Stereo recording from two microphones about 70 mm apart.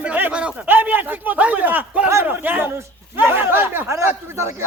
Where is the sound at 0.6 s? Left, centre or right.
Right.